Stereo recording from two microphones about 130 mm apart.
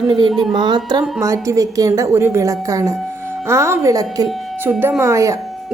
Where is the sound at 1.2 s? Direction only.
25° right (ahead or behind).